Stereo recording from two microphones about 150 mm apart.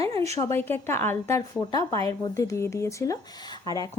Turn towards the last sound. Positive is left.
turn(degrees=25)  # may be behind; listen again after turning